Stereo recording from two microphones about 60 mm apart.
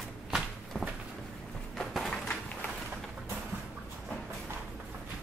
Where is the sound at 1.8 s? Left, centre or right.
Centre.